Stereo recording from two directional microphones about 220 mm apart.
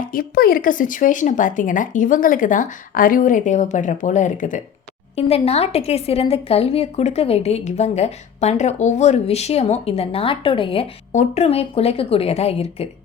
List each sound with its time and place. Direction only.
0.1 s a woman's voice: 40° left (ahead or behind)